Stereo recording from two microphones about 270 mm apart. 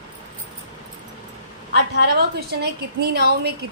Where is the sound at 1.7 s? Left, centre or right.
Right.